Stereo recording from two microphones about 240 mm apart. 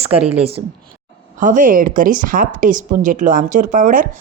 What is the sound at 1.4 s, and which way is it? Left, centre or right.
Speech, right.